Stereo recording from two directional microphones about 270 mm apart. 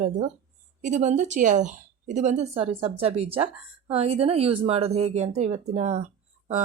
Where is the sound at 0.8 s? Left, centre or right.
Right.